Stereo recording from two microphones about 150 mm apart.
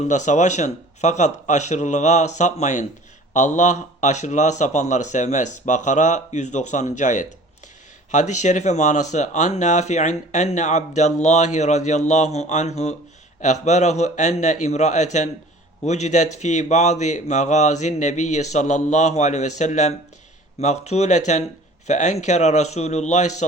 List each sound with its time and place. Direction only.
0.1 s speech: 55° left (ahead or behind)